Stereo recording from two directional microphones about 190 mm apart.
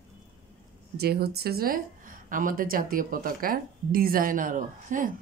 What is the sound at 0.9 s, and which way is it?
A woman's voice, 55° right (ahead or behind).